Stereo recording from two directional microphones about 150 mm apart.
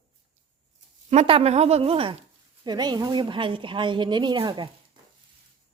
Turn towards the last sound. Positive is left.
turn(degrees=-35)  # may be behind; listen again after turning